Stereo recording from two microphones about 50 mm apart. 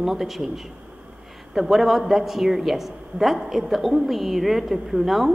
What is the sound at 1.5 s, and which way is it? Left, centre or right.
Speech, centre.